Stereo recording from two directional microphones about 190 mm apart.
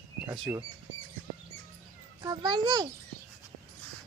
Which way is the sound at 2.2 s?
20° right (ahead or behind).